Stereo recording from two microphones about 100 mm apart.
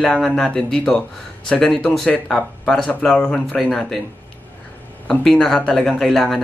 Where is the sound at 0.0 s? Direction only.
5° left (ahead or behind).